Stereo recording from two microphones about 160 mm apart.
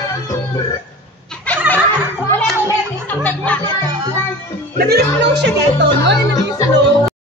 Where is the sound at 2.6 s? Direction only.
10° left (ahead or behind).